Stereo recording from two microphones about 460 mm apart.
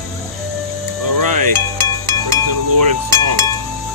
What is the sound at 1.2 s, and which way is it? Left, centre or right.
Music, right.